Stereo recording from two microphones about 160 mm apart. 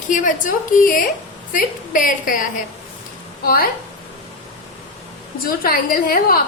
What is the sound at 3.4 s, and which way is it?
Speech, 65° left (ahead or behind).